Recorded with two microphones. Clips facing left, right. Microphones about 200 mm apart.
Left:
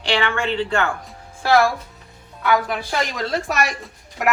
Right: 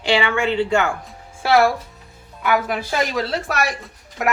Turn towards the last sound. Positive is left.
turn(degrees=0)  # may be behind; listen again after turning